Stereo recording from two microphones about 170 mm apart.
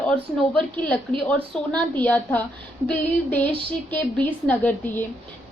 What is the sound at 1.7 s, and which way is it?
Speech, 10° left (ahead or behind).